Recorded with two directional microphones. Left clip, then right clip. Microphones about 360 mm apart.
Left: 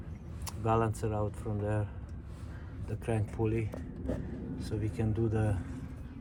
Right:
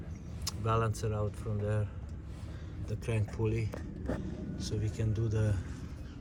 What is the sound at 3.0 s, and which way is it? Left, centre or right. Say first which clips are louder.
Speech: left 2 dB; centre.